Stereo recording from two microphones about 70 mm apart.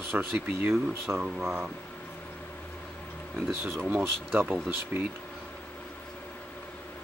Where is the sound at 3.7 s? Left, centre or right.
Right.